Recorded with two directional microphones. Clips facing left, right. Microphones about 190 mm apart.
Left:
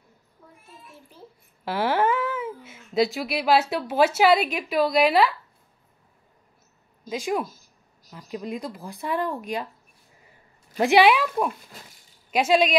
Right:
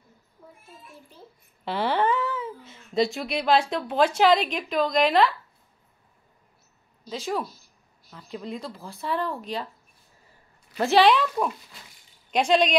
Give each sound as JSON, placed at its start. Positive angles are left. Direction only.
{"t": 1.6, "sound": "speech", "side_deg": 5}
{"t": 7.1, "sound": "speech", "side_deg": 15}
{"t": 10.8, "sound": "speech", "side_deg": 15}